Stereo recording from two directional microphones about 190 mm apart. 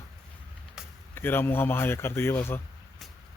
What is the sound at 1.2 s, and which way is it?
A man's voice, 10° left (ahead or behind).